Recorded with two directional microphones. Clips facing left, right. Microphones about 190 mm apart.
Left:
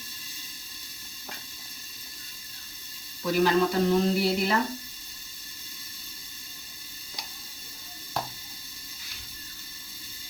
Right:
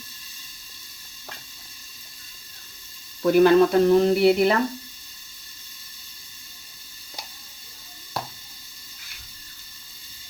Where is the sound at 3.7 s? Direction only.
60° right (ahead or behind).